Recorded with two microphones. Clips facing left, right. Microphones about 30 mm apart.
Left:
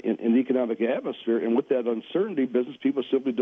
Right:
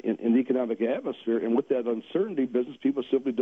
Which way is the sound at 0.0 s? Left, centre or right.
Centre.